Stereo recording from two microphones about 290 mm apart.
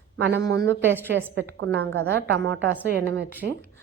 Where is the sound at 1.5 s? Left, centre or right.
Right.